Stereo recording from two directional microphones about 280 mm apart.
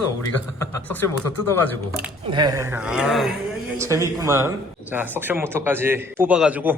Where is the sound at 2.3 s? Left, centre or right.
Centre.